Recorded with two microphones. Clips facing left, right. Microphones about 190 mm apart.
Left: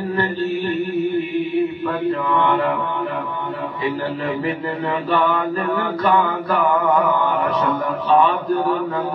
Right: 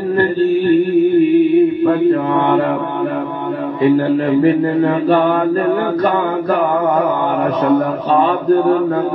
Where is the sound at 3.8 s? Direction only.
45° right (ahead or behind).